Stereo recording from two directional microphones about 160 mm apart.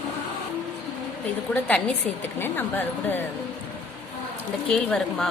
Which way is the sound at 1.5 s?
5° left (ahead or behind).